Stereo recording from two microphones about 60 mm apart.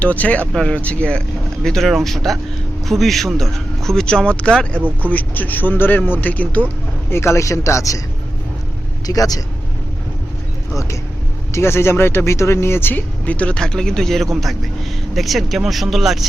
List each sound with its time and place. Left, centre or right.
0.0 s speech: left
1.6 s speech: centre
5.1 s speech: left
7.1 s a man's voice: left
9.0 s speech: left
11.5 s speech: left
13.6 s speech: centre